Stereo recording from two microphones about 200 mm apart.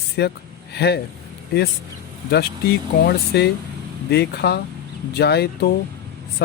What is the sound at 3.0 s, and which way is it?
Speech, 55° left (ahead or behind).